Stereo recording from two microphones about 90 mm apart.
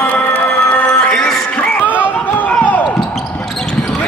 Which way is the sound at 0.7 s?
10° left (ahead or behind).